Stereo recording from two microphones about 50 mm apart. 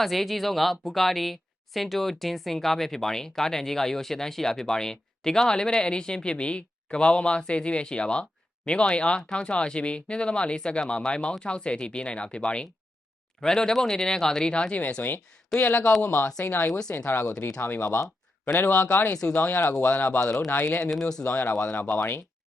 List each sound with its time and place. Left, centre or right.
0.0 s speech: centre
14.5 s speech: left
15.6 s speech: left
21.0 s speech: centre
21.2 s speech: left
21.6 s speech: left
21.9 s speech: left